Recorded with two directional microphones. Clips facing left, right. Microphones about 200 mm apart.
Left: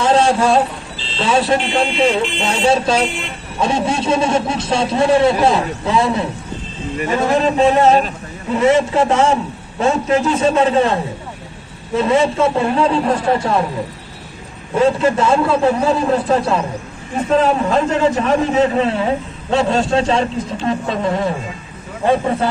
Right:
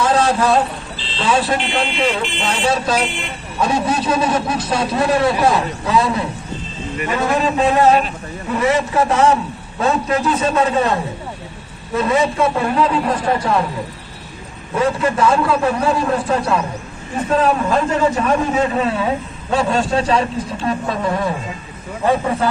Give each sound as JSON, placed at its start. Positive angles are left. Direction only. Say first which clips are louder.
{"t": 0.0, "sound": "vehicle", "louder": "left 2 dB", "side_deg": 25}
{"t": 1.2, "sound": "a man's voice", "louder": "left 2 dB", "side_deg": 25}
{"t": 12.0, "sound": "a man's voice", "louder": "left 2 dB", "side_deg": 25}
{"t": 14.9, "sound": "a man's voice", "louder": "left 1 dB", "side_deg": 25}